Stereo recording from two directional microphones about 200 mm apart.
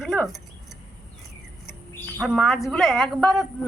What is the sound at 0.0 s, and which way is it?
Keys jangling, centre (ahead or behind).